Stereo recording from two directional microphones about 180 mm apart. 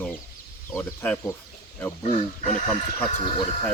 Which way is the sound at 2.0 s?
40° left (ahead or behind).